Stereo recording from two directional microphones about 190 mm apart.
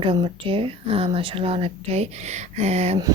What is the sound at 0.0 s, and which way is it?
Speech, 30° right (ahead or behind).